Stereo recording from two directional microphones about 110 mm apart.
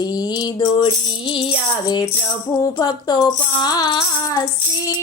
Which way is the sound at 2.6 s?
35° left (ahead or behind).